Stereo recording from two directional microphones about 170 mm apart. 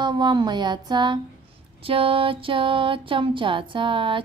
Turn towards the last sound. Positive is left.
turn(degrees=-30)  # may be behind; listen again after turning